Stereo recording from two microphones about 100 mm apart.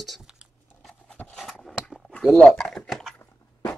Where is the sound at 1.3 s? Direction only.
Centre (ahead or behind).